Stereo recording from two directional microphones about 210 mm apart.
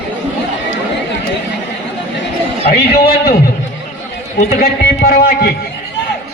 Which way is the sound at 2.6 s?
45° left (ahead or behind).